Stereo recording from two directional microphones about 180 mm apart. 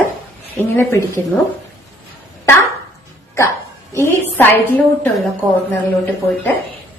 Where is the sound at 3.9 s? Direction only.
15° left (ahead or behind).